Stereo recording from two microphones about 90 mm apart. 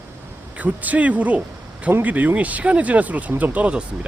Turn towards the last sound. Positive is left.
turn(degrees=-15)  # may be behind; listen again after turning